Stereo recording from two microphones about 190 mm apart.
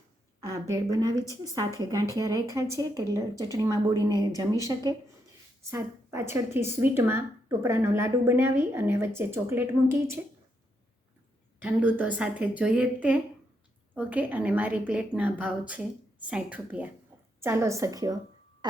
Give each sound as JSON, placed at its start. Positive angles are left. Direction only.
{"t": 0.7, "sound": "a woman's voice", "side_deg": -20}
{"t": 1.1, "sound": "a woman's voice", "side_deg": 15}
{"t": 1.5, "sound": "a woman's voice", "side_deg": -20}
{"t": 11.6, "sound": "a woman's voice", "side_deg": -10}
{"t": 18.6, "sound": "a sound", "side_deg": -20}